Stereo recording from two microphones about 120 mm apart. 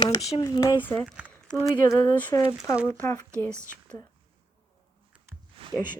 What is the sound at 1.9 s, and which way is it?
A woman's voice, 15° left (ahead or behind).